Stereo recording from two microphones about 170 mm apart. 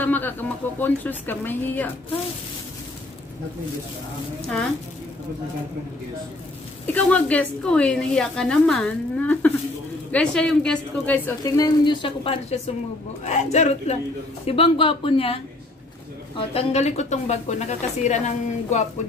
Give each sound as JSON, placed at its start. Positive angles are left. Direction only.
{"t": 0.0, "sound": "a woman's voice", "side_deg": 10}
{"t": 6.9, "sound": "a woman's voice", "side_deg": 10}
{"t": 11.5, "sound": "a woman's voice", "side_deg": 25}